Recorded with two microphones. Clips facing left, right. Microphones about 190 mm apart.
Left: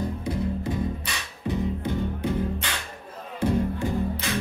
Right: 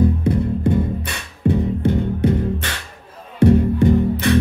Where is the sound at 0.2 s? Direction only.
60° right (ahead or behind).